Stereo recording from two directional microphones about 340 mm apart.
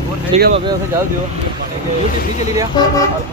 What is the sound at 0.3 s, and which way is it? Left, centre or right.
Speech, centre.